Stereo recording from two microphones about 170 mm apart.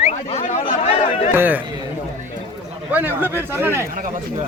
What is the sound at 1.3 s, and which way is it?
Speech, 10° right (ahead or behind).